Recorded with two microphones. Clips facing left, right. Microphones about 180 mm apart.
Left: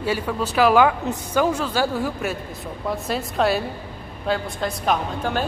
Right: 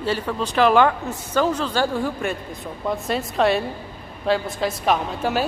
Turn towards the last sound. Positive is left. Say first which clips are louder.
# right 1 dB
turn(degrees=-5)  # may be behind; listen again after turning